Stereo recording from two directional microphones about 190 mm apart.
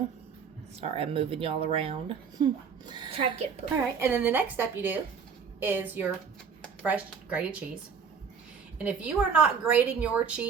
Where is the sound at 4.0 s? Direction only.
10° right (ahead or behind).